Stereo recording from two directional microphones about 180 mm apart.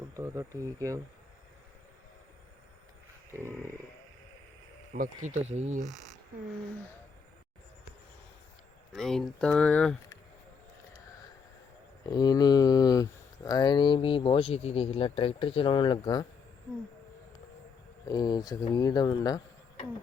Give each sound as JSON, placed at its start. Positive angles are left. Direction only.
{"t": 0.2, "sound": "speech", "side_deg": -15}
{"t": 4.9, "sound": "speech", "side_deg": -40}
{"t": 8.9, "sound": "speech", "side_deg": 0}
{"t": 12.0, "sound": "speech", "side_deg": 25}
{"t": 18.1, "sound": "speech", "side_deg": 20}